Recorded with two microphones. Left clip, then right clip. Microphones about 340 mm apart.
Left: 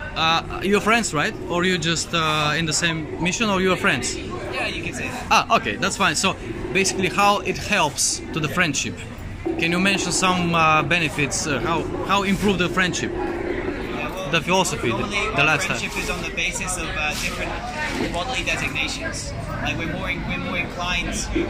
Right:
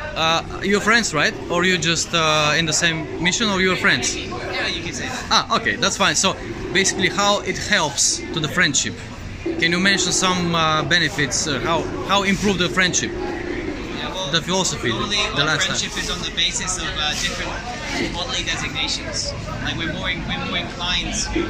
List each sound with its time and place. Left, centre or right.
0.2 s speech: centre
5.3 s speech: centre
14.3 s speech: centre
18.3 s speech: centre
20.1 s speech: centre